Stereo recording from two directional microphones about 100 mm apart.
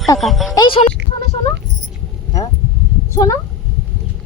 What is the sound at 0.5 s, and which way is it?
Speech, 50° left (ahead or behind).